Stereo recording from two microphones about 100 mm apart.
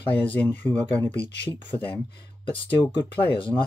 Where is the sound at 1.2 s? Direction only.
60° left (ahead or behind).